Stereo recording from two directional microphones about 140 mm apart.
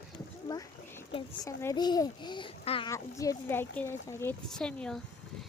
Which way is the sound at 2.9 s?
20° left (ahead or behind).